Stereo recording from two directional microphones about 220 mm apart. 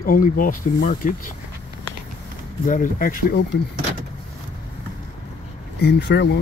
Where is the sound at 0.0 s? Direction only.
40° left (ahead or behind).